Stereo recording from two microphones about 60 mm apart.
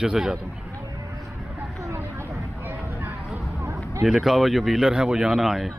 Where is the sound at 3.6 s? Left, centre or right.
Right.